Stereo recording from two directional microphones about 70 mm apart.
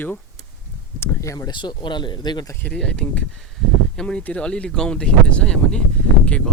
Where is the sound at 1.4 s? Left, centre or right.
Left.